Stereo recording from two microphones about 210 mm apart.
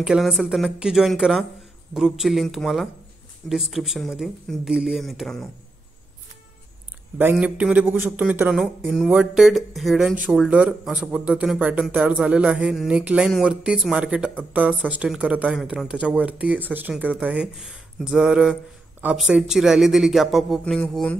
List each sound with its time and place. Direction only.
0.0 s speech: centre (ahead or behind)
7.2 s speech: 10° right (ahead or behind)